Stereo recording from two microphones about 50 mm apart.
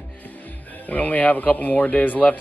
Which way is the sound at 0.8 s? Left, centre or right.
Left.